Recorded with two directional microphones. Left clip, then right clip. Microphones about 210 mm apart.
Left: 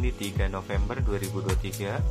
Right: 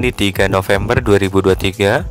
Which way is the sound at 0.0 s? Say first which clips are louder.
Right 18 dB; 60° right (ahead or behind).